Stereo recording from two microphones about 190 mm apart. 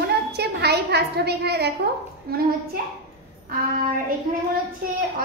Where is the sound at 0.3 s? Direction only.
60° right (ahead or behind).